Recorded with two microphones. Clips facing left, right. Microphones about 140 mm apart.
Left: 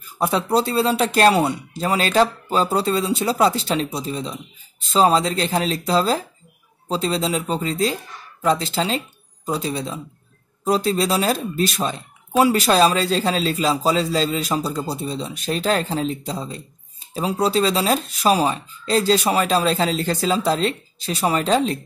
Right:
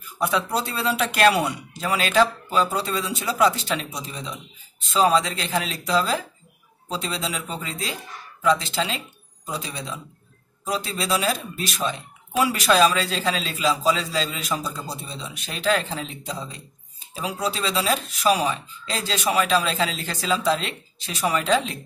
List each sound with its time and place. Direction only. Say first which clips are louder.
0.2 s speech: left 5 dB; 35° left (ahead or behind)